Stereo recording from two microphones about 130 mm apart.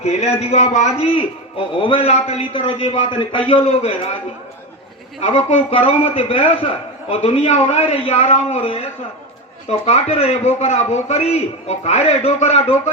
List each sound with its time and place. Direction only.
0.0 s a man's voice: 55° left (ahead or behind)
0.3 s a man's voice: 70° left (ahead or behind); by 2.4 s 55° left (ahead or behind)
2.5 s a man's voice: 40° left (ahead or behind)
5.7 s a man's voice: 45° left (ahead or behind)
7.3 s a man's voice: 60° left (ahead or behind)